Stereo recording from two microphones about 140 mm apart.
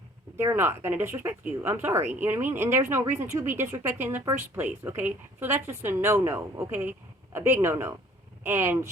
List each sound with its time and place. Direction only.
0.3 s speech: 15° right (ahead or behind)